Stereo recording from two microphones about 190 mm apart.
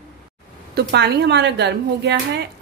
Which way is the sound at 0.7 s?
60° right (ahead or behind).